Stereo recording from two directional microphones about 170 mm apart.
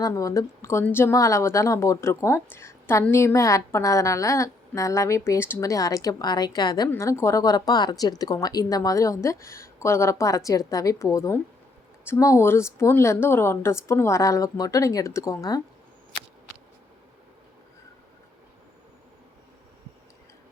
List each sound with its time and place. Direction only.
0.0 s a woman's voice: 20° left (ahead or behind)